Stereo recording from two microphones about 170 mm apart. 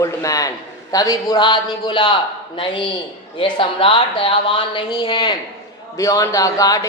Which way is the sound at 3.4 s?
30° left (ahead or behind).